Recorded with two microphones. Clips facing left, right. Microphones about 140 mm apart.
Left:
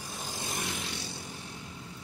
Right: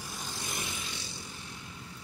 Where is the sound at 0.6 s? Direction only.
65° left (ahead or behind).